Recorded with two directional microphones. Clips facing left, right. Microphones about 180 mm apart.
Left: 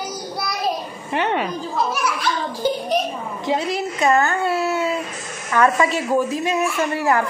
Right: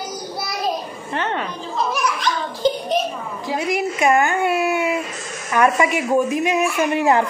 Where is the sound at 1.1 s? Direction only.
15° left (ahead or behind).